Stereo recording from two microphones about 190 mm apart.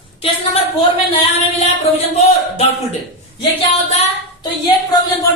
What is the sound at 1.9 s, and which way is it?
Speech, 35° left (ahead or behind).